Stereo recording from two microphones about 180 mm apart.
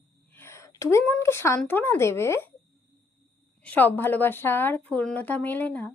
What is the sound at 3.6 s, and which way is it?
A woman's voice, 10° left (ahead or behind).